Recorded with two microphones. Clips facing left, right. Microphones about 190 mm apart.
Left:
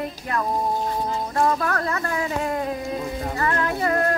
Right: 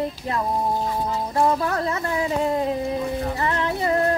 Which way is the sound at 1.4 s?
20° right (ahead or behind).